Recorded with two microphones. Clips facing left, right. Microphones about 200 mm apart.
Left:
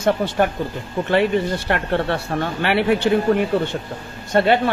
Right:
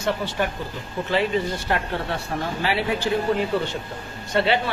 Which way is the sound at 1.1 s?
65° left (ahead or behind).